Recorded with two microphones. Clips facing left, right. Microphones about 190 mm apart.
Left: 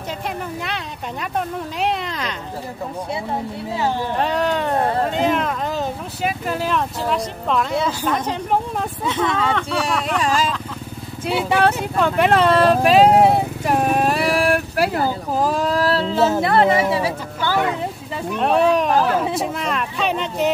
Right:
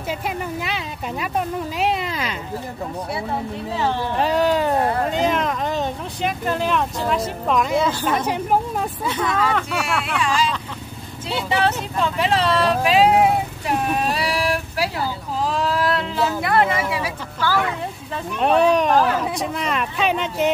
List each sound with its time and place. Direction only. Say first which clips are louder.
0.6 s speech: right 1 dB; 5° right (ahead or behind)
1.8 s cat: even; 5° right (ahead or behind)
4.2 s speech: right 3 dB; centre (ahead or behind)
9.0 s speech: left 2 dB; 25° left (ahead or behind)
10.0 s speech: left 2 dB; 40° left (ahead or behind)
11.4 s speech: left 2 dB; 55° left (ahead or behind); by 13.7 s 40° left (ahead or behind)
13.8 s a sound: left 4 dB; 50° left (ahead or behind); by 17.6 s 20° left (ahead or behind)
18.4 s speech: even; centre (ahead or behind)